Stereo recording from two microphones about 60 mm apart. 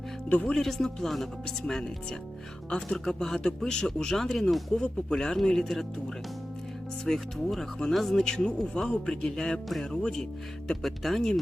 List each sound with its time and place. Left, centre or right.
0.3 s speech: left
0.5 s a man's voice: centre
7.0 s a man's voice: centre